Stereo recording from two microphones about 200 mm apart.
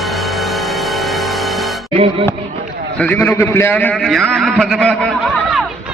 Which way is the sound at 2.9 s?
5° left (ahead or behind).